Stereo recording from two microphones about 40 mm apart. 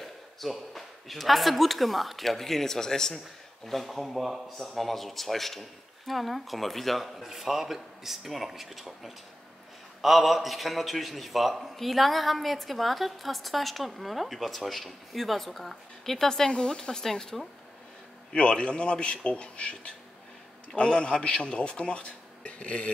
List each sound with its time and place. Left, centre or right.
0.0 s a man's voice: centre
18.3 s a man's voice: left